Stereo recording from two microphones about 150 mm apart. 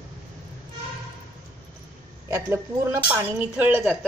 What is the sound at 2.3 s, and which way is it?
Speech, 20° right (ahead or behind).